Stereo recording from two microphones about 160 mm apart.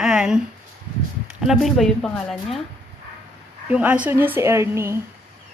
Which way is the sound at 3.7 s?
10° right (ahead or behind).